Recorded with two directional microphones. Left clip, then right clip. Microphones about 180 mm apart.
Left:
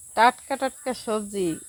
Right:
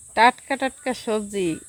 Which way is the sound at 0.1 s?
25° right (ahead or behind).